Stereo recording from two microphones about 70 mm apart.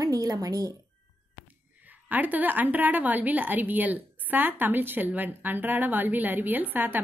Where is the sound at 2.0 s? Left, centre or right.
Right.